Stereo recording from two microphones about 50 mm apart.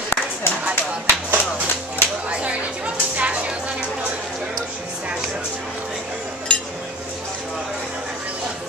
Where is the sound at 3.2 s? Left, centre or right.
Right.